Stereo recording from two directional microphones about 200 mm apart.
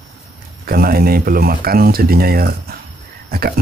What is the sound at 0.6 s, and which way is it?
Speech, 50° right (ahead or behind).